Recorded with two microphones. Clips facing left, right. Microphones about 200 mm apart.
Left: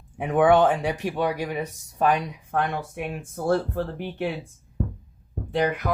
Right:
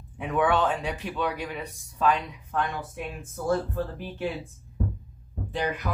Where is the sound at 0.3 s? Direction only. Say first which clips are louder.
Left 6 dB; 50° left (ahead or behind).